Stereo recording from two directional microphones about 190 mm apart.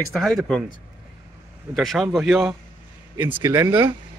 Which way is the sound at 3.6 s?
25° right (ahead or behind).